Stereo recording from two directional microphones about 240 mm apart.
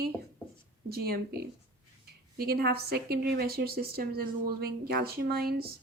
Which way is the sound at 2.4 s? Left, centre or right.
Right.